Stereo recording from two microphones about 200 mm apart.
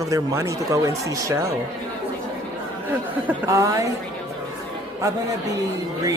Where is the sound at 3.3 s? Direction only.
15° right (ahead or behind).